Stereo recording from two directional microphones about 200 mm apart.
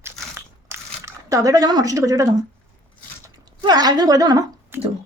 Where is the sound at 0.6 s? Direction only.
15° right (ahead or behind).